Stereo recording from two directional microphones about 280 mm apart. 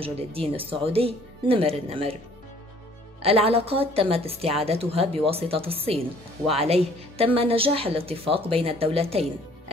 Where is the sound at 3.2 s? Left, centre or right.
Right.